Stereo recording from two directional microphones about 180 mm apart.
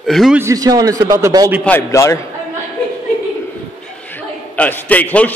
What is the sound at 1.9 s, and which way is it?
Speech, 15° left (ahead or behind).